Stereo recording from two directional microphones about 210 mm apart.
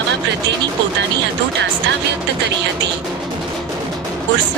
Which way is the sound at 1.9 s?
55° right (ahead or behind).